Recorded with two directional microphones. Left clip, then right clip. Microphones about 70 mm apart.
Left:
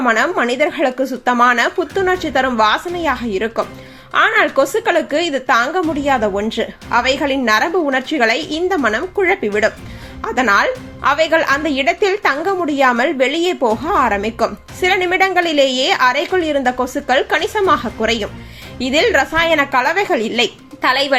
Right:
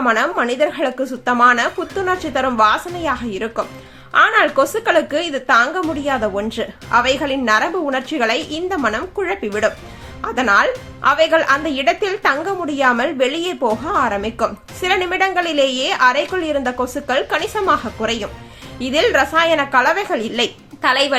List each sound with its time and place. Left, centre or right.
0.0 s a woman's voice: left